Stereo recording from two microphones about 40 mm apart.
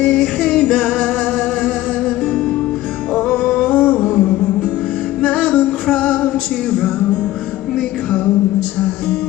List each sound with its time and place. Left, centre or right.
0.0 s music: left
3.6 s music: left